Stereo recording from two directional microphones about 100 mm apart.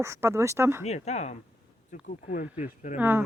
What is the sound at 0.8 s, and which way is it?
Speech, 90° left.